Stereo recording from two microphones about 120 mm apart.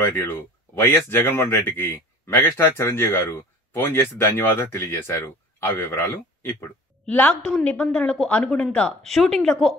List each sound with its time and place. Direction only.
0.0 s a woman's voice: 20° left (ahead or behind); by 9.8 s centre (ahead or behind)